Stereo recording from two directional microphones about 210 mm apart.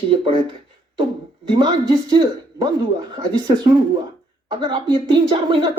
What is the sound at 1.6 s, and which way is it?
Speech, 20° right (ahead or behind).